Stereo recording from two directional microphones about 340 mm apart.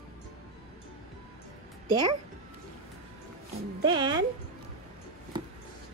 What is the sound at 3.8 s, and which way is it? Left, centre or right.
Speech, centre.